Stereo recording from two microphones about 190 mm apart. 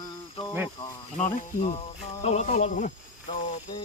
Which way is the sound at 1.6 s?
35° left (ahead or behind).